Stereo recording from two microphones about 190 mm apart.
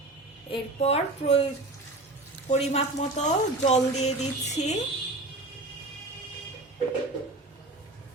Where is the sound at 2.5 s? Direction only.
35° left (ahead or behind).